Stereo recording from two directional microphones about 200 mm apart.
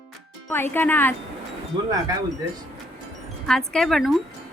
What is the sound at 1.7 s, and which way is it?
Speech, 20° right (ahead or behind).